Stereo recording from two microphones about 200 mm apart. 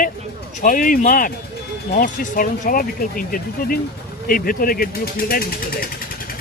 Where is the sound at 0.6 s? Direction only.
45° left (ahead or behind).